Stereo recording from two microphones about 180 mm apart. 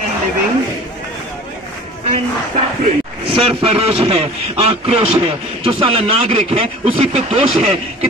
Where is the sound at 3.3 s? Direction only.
30° right (ahead or behind).